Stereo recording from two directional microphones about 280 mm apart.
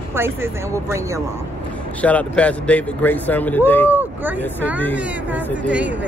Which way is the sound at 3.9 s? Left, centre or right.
Centre.